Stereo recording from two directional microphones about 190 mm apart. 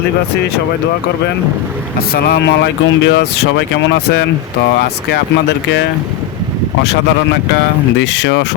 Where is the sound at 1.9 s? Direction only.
55° left (ahead or behind).